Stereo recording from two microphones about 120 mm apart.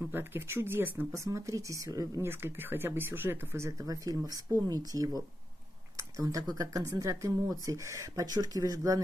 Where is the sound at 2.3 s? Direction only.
20° right (ahead or behind).